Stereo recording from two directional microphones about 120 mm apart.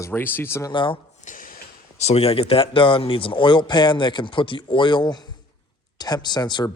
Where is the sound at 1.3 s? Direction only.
90° left.